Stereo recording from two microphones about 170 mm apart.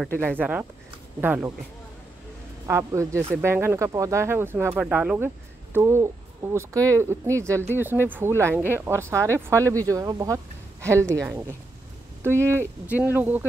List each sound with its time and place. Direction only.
0.1 s speech: 5° left (ahead or behind)
0.4 s speech: 10° right (ahead or behind)
2.6 s speech: 15° right (ahead or behind)